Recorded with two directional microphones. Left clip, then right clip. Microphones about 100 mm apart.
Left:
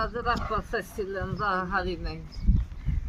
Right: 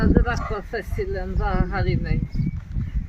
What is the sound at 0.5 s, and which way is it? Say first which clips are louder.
Speech: right 1 dB; 40° left (ahead or behind).